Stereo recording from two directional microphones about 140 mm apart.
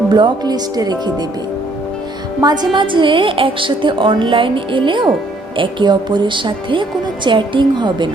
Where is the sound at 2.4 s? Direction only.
30° right (ahead or behind).